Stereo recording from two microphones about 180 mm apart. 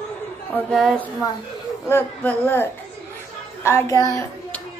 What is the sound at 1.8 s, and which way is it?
Speech, 10° left (ahead or behind).